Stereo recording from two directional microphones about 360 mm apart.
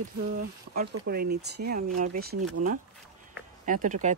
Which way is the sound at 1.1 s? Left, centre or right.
Right.